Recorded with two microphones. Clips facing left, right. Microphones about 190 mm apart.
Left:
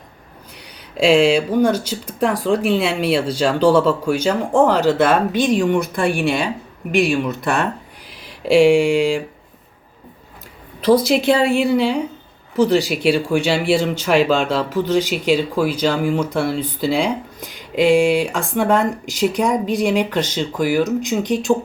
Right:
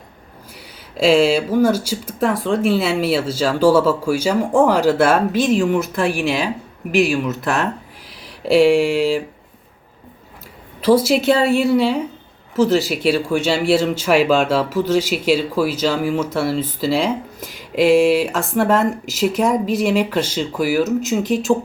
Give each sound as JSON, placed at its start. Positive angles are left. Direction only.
{"t": 0.9, "sound": "speech", "side_deg": 0}
{"t": 10.8, "sound": "speech", "side_deg": -5}